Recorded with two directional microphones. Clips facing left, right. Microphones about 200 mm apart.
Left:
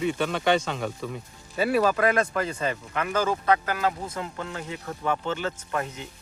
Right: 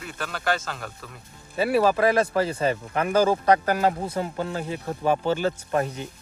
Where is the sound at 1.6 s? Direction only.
30° right (ahead or behind).